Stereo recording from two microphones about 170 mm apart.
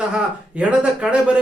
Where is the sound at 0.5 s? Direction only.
5° right (ahead or behind).